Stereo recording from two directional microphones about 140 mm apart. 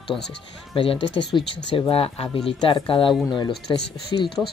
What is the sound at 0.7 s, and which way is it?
Speech, 40° left (ahead or behind).